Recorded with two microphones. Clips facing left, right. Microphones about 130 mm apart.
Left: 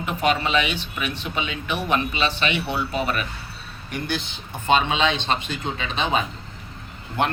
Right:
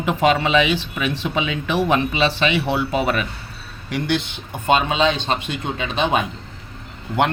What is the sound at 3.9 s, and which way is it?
Speech, 75° right (ahead or behind).